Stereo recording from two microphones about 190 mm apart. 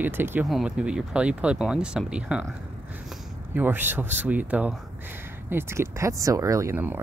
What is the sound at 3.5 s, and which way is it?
Speech, 10° right (ahead or behind).